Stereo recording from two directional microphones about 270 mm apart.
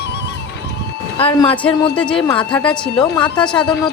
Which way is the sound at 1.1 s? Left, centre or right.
Centre.